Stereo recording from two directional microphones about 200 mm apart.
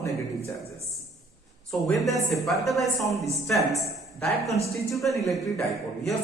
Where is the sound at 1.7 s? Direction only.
Centre (ahead or behind).